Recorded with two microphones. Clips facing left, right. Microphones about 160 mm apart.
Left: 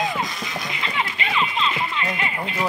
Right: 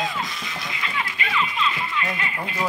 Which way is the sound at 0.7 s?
25° left (ahead or behind).